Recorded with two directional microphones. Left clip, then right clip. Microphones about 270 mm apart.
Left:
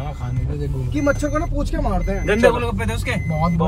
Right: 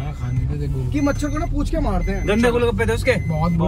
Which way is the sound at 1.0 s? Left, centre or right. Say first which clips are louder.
Left 5 dB; right.